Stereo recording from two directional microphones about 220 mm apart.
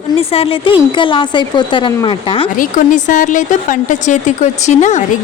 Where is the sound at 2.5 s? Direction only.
35° left (ahead or behind).